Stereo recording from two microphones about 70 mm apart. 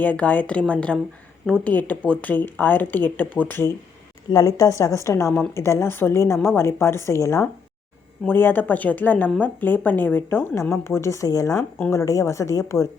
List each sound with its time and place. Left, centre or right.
0.0 s speech: left
4.3 s a woman's voice: left
8.3 s speech: left
10.4 s speech: left